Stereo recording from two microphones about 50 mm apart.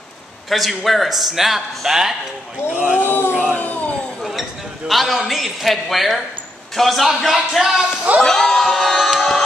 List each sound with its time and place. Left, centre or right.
0.5 s a man's voice: centre
2.7 s speech: right
3.0 s a sound: left
3.5 s a sound: left
4.2 s a man's voice: centre
8.2 s speech: centre
8.9 s music: centre